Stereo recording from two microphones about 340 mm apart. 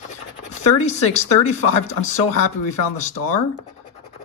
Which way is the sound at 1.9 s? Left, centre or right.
Left.